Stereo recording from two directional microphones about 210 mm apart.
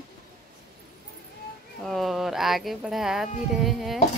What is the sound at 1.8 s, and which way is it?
A woman's voice, centre (ahead or behind).